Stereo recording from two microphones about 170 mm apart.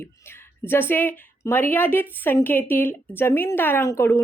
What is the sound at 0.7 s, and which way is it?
Speech, 15° left (ahead or behind).